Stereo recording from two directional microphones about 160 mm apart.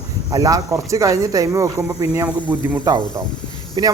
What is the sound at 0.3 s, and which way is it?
A man's voice, 20° right (ahead or behind).